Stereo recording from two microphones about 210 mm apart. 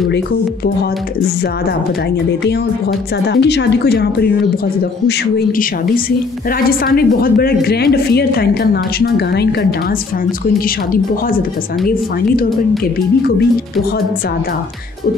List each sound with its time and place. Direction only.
3.3 s a woman's voice: 55° left (ahead or behind)
6.7 s a woman's voice: 45° left (ahead or behind)